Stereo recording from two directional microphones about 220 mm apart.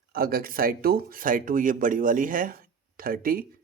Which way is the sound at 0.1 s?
40° right (ahead or behind).